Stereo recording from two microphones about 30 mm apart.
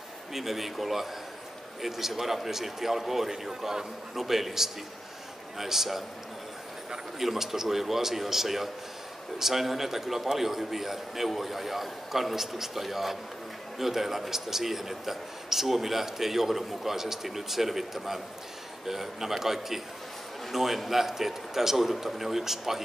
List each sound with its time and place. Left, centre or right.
0.3 s a man's voice: centre
7.2 s a man's voice: centre